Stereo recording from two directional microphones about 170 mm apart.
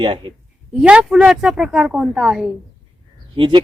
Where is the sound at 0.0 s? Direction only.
30° right (ahead or behind).